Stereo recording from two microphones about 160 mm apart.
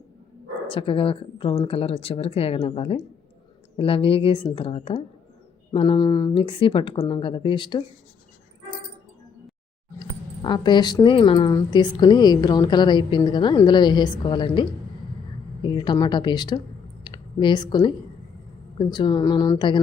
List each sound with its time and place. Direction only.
0.7 s speech: 35° left (ahead or behind)
10.0 s speech: 30° left (ahead or behind)